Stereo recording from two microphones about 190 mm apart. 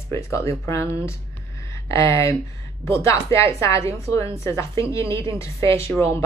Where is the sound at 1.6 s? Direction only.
15° left (ahead or behind).